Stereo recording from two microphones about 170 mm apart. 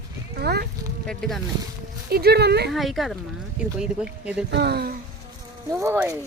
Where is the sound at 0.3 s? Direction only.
70° right (ahead or behind).